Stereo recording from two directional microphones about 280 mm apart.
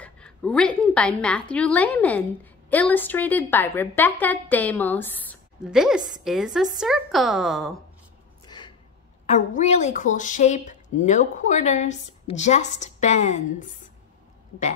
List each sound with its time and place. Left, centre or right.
0.0 s a woman's voice: centre
8.5 s a sound: centre
9.2 s speech: left